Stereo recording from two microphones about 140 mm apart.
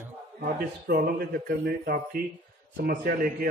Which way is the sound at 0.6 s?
90° right.